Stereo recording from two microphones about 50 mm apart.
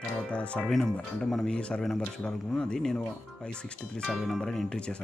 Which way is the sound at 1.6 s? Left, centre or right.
Left.